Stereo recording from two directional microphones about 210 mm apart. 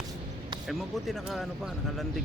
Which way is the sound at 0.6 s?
Centre (ahead or behind).